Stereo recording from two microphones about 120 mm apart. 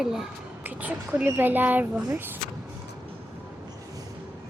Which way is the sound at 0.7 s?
15° right (ahead or behind).